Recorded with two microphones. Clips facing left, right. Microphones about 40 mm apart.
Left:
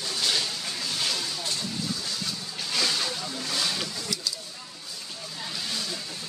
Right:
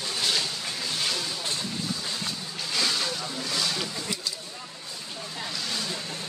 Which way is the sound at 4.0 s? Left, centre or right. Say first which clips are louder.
Even; right.